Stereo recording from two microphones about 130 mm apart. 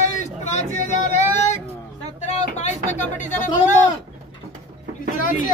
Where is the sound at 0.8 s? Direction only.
65° left (ahead or behind).